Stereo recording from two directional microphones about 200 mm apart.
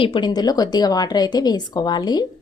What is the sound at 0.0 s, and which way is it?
A woman's voice, 25° left (ahead or behind).